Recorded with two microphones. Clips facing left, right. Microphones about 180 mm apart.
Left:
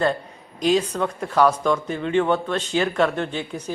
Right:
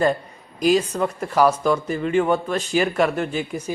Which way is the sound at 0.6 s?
5° right (ahead or behind).